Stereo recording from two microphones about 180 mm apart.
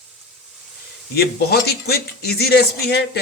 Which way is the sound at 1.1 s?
60° left (ahead or behind).